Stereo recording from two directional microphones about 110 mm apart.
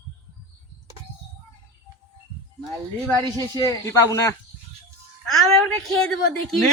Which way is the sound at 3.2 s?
35° right (ahead or behind).